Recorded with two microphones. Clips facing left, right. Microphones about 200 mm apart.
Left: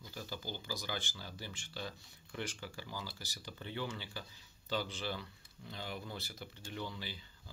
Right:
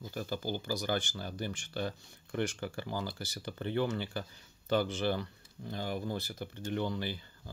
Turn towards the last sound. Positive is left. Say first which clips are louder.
# right 10 dB
turn(degrees=-60)  # may be behind; listen again after turning